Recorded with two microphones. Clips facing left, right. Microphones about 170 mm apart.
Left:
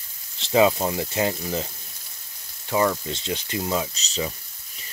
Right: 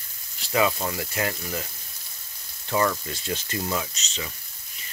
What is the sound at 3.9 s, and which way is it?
Speech, 35° left (ahead or behind).